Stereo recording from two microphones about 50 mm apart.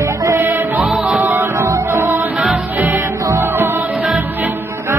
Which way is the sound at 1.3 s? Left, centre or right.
Right.